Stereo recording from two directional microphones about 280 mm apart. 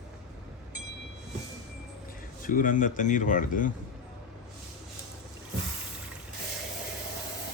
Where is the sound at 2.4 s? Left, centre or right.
Left.